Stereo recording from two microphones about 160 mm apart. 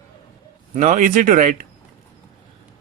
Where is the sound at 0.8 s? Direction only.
50° right (ahead or behind).